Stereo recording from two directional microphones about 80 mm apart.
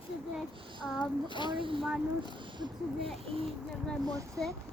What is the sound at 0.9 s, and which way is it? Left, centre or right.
Child singing, left.